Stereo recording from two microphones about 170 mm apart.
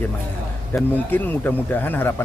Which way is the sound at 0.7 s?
10° left (ahead or behind).